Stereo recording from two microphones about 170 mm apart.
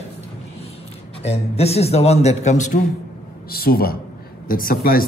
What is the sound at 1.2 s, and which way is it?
A man's voice, 35° left (ahead or behind).